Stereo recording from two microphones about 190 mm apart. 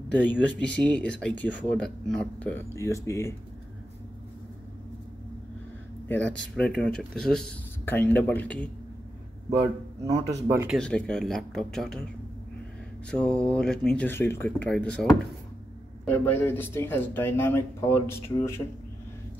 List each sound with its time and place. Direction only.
0.1 s speech: 10° left (ahead or behind)
6.0 s speech: 10° left (ahead or behind)
10.0 s speech: 20° right (ahead or behind)
10.8 s speech: 5° left (ahead or behind)
13.1 s speech: 5° left (ahead or behind)
16.1 s speech: 10° left (ahead or behind)